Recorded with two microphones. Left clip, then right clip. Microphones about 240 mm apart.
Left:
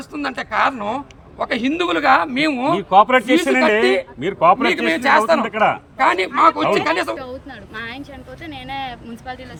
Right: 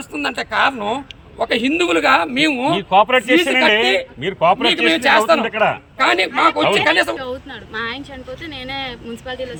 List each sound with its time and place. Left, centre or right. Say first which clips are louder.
0.1 s a man's voice: right 2 dB; centre
2.9 s a man's voice: even; right
4.9 s a man's voice: right 1 dB; centre
5.5 s a man's voice: even; right
6.0 s a man's voice: even; centre